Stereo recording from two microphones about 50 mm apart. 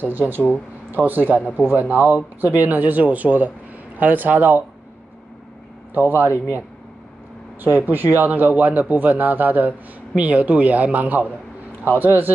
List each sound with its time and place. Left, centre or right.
0.0 s a man's voice: right
5.9 s a man's voice: right
7.6 s a man's voice: right